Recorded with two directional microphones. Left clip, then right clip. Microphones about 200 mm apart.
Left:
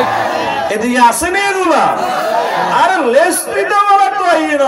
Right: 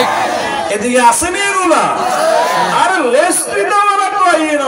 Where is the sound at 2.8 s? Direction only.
30° left (ahead or behind).